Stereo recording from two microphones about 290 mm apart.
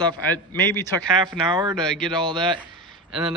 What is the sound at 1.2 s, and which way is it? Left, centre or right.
Speech, centre.